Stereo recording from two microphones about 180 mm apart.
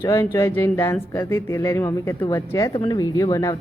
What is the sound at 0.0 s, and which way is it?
Speech, 15° left (ahead or behind).